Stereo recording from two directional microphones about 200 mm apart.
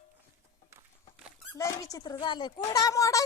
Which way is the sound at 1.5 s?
15° left (ahead or behind).